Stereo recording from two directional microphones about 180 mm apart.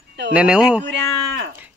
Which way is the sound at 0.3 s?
5° right (ahead or behind).